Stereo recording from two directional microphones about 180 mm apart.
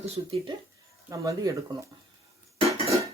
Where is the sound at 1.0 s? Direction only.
20° right (ahead or behind).